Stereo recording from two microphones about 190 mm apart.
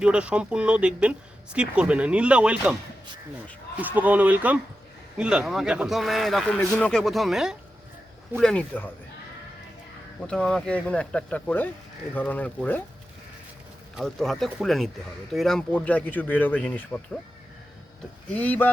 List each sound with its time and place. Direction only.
0.0 s speech: 5° right (ahead or behind)
3.8 s speech: 10° right (ahead or behind); by 8.9 s 5° left (ahead or behind)
10.2 s speech: 5° left (ahead or behind)
13.9 s speech: centre (ahead or behind)
18.3 s speech: 10° left (ahead or behind)